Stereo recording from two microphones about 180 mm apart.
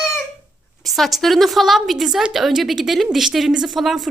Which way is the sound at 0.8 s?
Centre (ahead or behind).